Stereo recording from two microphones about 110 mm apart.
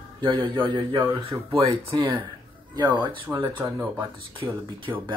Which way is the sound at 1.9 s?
45° right (ahead or behind).